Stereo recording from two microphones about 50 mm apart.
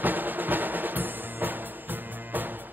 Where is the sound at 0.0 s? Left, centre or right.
Right.